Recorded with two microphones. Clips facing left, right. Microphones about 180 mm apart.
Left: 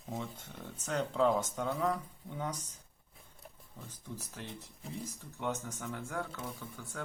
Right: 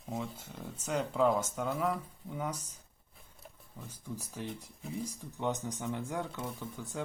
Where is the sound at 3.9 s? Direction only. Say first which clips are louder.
Right 4 dB; 10° right (ahead or behind).